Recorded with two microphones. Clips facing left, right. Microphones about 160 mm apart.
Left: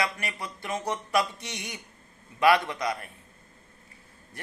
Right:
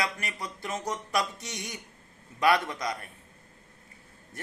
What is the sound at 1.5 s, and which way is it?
A man's voice, 25° left (ahead or behind).